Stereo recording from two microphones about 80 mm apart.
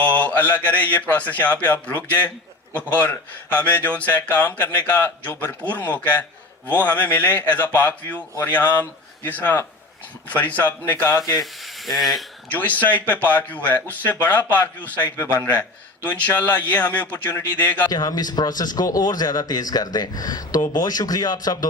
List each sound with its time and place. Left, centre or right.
0.0 s mantra: centre
0.8 s speech: left
11.3 s speech: centre
12.5 s speech: centre
17.8 s speech: left